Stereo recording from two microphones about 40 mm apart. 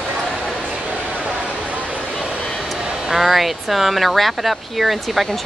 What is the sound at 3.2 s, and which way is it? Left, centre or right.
Speech, centre.